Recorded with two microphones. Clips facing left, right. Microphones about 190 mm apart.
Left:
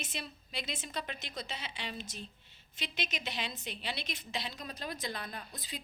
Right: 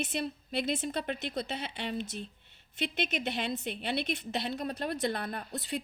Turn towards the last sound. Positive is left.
turn(degrees=-65)  # may be behind; listen again after turning